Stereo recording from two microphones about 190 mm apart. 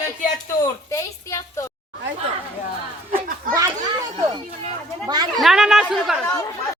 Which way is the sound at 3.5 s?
20° right (ahead or behind).